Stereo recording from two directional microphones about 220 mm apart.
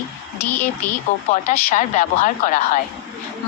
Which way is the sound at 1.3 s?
35° left (ahead or behind).